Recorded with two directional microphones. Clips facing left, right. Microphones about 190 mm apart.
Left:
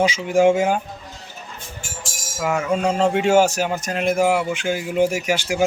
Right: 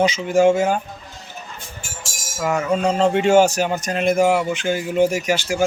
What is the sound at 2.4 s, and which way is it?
Speech, 5° left (ahead or behind).